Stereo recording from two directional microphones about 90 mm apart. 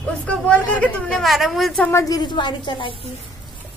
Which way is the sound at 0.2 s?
15° left (ahead or behind).